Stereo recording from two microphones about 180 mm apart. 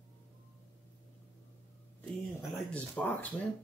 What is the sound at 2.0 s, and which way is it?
Speech, 5° left (ahead or behind).